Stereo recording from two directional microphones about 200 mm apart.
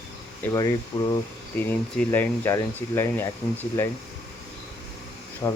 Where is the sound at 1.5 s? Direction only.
10° left (ahead or behind).